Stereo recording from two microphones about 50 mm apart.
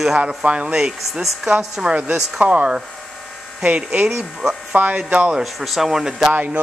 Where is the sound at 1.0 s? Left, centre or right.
Centre.